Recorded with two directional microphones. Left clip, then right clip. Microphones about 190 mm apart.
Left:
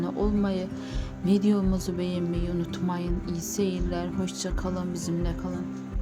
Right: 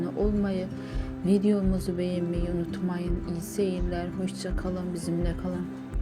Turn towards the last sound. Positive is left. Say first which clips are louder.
# even
turn(degrees=5)  # may be behind; listen again after turning